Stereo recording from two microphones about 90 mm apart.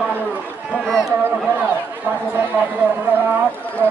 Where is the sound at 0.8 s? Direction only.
5° left (ahead or behind).